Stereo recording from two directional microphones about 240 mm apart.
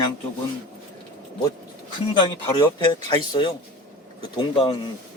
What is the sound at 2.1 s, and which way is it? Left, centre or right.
Speech, centre.